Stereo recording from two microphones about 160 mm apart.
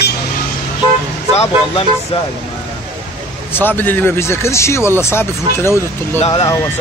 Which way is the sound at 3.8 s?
10° left (ahead or behind).